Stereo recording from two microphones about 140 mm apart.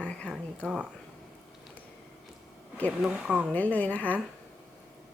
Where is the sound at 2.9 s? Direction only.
10° right (ahead or behind).